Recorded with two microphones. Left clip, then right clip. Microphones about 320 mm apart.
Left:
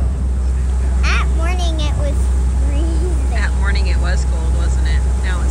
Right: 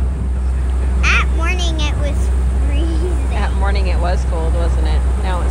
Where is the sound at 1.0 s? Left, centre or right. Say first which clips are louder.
Right 5 dB; centre.